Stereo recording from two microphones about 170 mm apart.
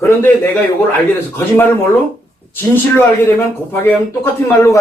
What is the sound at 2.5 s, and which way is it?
Speech, 10° left (ahead or behind).